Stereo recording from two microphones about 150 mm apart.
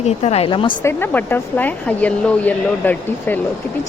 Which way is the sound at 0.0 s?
45° left (ahead or behind).